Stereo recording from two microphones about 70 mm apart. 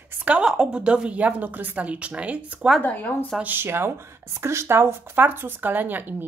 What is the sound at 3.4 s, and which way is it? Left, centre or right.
Speech, right.